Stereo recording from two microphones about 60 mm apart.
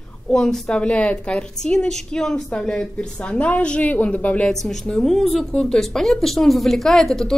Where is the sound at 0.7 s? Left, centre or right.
Left.